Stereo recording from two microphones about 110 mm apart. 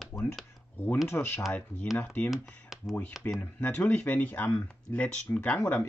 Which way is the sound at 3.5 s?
15° left (ahead or behind).